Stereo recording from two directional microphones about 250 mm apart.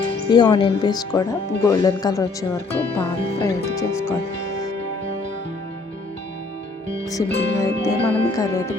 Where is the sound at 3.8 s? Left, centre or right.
Centre.